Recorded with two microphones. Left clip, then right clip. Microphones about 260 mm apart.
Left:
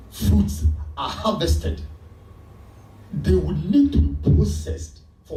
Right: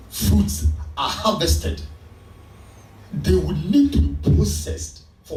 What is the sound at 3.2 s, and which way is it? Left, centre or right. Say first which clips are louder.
A man's voice: right 1 dB; centre.